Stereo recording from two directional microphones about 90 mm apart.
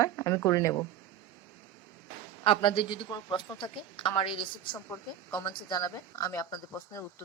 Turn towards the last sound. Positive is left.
turn(degrees=35)  # may be behind; listen again after turning